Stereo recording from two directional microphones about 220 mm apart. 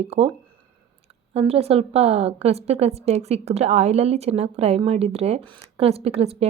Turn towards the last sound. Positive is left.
turn(degrees=-25)  # may be behind; listen again after turning